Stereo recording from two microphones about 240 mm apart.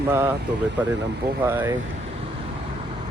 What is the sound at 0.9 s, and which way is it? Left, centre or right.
Speech, right.